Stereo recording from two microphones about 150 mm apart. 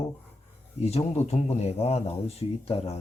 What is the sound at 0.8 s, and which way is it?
Speech, 45° left (ahead or behind).